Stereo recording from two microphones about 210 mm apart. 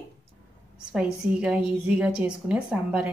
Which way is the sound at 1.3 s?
5° right (ahead or behind).